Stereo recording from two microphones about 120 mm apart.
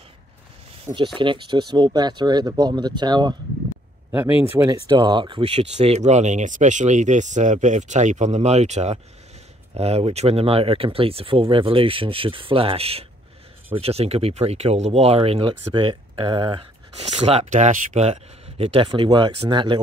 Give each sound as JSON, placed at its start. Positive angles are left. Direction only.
{"t": 0.9, "sound": "speech", "side_deg": -40}
{"t": 4.1, "sound": "speech", "side_deg": -20}
{"t": 4.8, "sound": "speech", "side_deg": -40}
{"t": 5.5, "sound": "speech", "side_deg": -60}
{"t": 9.8, "sound": "speech", "side_deg": -60}
{"t": 15.7, "sound": "speech", "side_deg": -40}
{"t": 16.9, "sound": "speech", "side_deg": -65}